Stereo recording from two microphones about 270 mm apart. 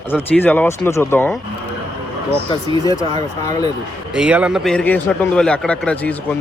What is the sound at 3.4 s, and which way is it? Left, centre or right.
Speech, centre.